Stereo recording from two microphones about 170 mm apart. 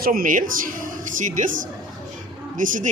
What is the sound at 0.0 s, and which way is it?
A woman's voice, 55° right (ahead or behind).